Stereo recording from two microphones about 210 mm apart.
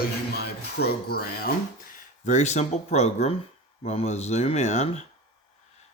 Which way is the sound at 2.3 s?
30° left (ahead or behind).